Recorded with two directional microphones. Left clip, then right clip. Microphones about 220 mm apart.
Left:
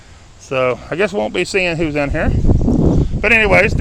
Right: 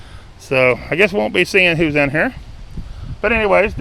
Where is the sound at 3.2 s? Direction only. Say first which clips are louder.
Left 2 dB; 10° left (ahead or behind).